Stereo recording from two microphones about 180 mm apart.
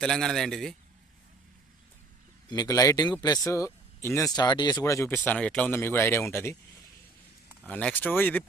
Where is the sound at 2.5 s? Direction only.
20° left (ahead or behind).